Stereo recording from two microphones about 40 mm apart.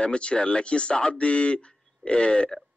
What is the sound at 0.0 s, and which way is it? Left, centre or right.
A man's voice, left.